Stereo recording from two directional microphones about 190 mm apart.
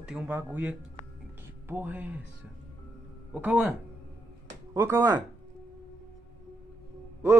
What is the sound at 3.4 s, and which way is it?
Speech, 10° right (ahead or behind).